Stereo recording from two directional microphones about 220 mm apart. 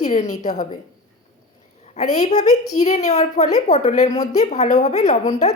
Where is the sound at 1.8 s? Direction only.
30° left (ahead or behind).